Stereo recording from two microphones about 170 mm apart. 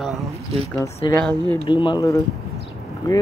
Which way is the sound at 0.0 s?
Centre (ahead or behind).